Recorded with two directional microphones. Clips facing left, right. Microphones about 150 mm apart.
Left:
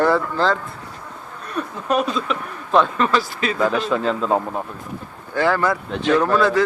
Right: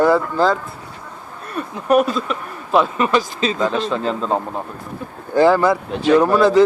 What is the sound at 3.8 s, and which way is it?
Speech, centre (ahead or behind).